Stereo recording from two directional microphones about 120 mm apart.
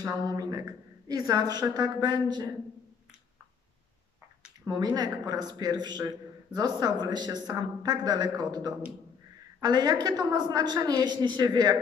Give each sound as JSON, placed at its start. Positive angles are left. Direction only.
{"t": 0.0, "sound": "a man's voice", "side_deg": -30}
{"t": 4.9, "sound": "a man's voice", "side_deg": -35}